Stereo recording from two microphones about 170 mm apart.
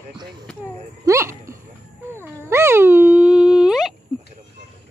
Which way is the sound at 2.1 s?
15° right (ahead or behind).